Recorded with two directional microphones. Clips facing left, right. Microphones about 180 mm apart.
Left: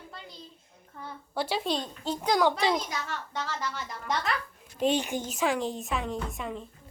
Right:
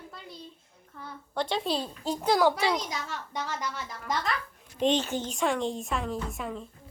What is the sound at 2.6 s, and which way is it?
Speech, 15° left (ahead or behind).